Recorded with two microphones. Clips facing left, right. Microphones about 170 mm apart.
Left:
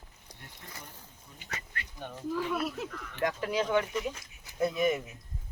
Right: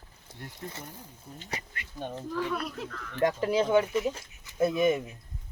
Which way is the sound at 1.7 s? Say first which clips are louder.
Right 4 dB; 20° right (ahead or behind).